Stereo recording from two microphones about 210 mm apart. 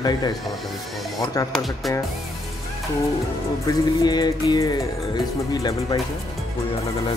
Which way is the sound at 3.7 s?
20° left (ahead or behind).